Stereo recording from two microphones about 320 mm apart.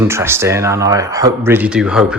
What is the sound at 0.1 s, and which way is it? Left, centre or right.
Speech, centre.